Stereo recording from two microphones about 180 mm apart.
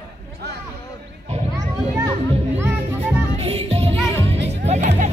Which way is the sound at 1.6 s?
20° right (ahead or behind).